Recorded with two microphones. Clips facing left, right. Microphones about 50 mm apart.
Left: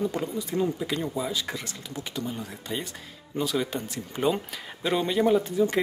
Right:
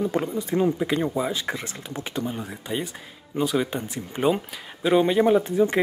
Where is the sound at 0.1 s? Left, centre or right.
Right.